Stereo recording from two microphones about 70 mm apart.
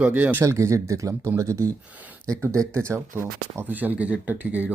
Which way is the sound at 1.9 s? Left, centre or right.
Right.